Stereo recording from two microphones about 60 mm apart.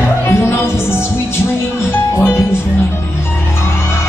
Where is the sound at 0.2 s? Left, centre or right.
Left.